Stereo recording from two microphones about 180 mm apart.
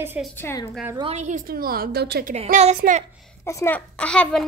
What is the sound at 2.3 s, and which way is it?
Speech, 35° right (ahead or behind).